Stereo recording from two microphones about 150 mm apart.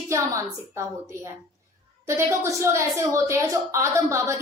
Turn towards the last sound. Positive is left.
turn(degrees=-20)  # may be behind; listen again after turning